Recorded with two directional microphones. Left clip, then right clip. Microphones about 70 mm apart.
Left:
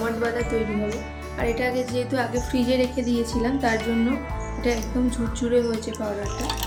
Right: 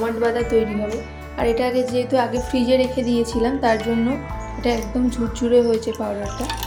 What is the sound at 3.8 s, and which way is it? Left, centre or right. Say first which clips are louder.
Speech: right 3 dB; centre.